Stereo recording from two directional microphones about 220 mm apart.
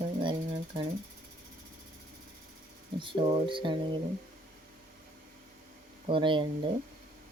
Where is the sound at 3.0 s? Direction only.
20° right (ahead or behind).